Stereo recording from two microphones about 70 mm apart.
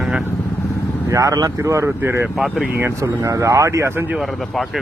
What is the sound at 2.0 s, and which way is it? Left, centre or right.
Speech, right.